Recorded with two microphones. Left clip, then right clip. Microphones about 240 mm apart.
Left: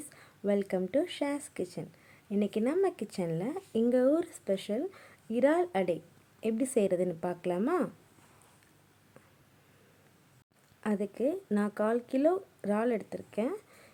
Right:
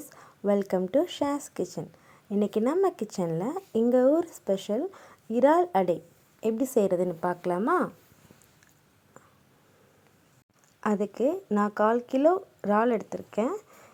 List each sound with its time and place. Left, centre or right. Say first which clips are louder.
0.2 s a woman's voice: right 5 dB; centre
10.8 s speech: right 6 dB; centre